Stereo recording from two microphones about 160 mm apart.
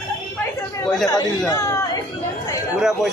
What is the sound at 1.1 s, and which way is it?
Speech, 25° left (ahead or behind).